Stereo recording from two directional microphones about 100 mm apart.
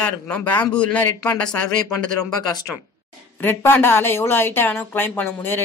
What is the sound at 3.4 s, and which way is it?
Speech, 20° left (ahead or behind).